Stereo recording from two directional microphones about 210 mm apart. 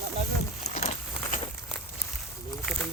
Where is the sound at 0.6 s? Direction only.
35° left (ahead or behind).